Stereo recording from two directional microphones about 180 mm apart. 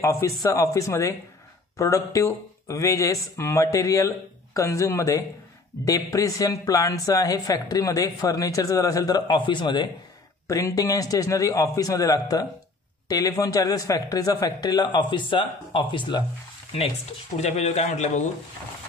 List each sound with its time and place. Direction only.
0.0 s speech: 15° left (ahead or behind)
17.4 s speech: 40° left (ahead or behind)